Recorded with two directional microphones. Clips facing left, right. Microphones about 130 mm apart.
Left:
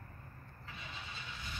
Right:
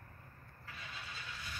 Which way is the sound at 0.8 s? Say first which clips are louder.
Left 1 dB; 20° left (ahead or behind).